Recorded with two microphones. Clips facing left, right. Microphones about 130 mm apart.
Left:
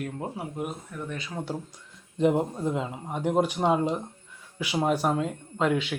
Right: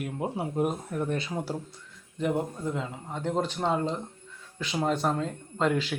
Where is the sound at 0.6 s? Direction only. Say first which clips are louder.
Right 8 dB; 45° right (ahead or behind).